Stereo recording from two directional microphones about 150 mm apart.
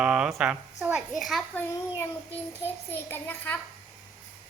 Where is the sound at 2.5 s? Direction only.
15° left (ahead or behind).